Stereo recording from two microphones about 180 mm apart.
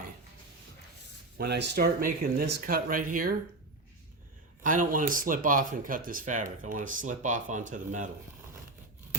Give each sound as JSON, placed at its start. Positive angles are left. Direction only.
{"t": 1.4, "sound": "speech", "side_deg": -70}
{"t": 4.6, "sound": "speech", "side_deg": -50}